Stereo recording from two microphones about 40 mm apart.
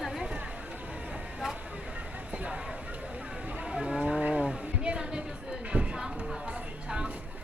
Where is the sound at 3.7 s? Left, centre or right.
Centre.